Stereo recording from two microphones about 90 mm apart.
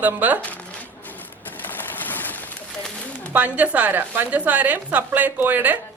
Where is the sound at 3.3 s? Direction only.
15° right (ahead or behind).